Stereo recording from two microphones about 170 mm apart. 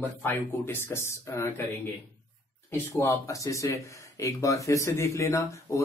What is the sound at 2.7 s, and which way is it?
Speech, 15° left (ahead or behind).